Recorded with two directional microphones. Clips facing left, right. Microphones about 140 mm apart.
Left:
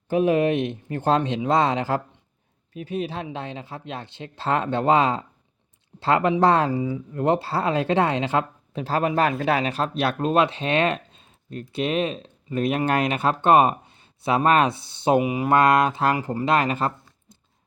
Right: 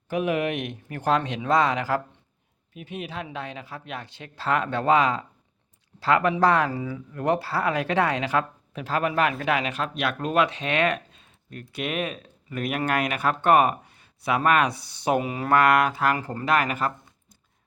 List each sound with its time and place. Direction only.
0.1 s speech: 30° left (ahead or behind)
2.7 s speech: 35° left (ahead or behind)
15.2 s speech: 15° left (ahead or behind)
16.1 s speech: 10° left (ahead or behind)
16.5 s speech: 25° left (ahead or behind)